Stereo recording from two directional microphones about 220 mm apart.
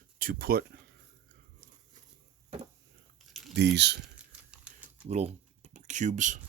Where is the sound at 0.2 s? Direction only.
40° right (ahead or behind).